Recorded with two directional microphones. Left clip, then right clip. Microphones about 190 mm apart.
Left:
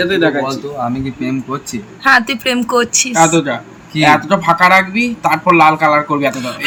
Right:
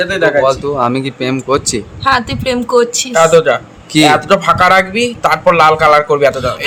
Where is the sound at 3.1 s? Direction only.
45° right (ahead or behind).